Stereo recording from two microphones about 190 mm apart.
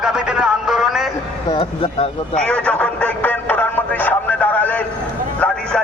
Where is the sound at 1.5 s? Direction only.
30° left (ahead or behind).